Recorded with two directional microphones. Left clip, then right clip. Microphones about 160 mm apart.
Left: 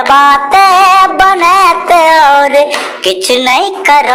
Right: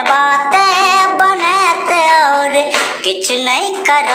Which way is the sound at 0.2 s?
40° left (ahead or behind).